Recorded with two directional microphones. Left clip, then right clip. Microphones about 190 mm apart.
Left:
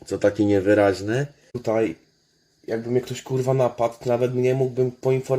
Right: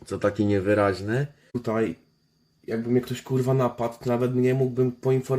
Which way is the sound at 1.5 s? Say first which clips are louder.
Left 4 dB; 15° right (ahead or behind).